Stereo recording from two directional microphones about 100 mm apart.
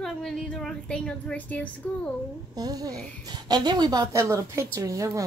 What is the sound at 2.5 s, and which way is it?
A woman's voice, 40° right (ahead or behind).